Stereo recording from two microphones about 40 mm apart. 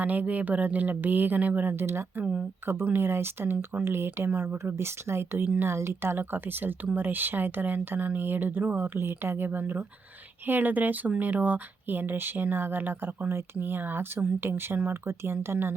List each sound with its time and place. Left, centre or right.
0.0 s speech: right
1.7 s speech: right
2.8 s speech: right
3.8 s speech: right